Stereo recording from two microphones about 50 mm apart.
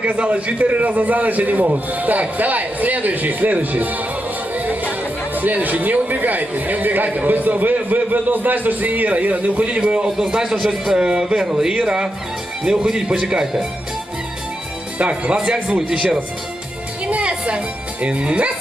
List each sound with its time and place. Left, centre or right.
0.0 s a man's voice: centre
9.6 s speech: centre
15.3 s speech: centre
17.1 s music: right
18.0 s speech: right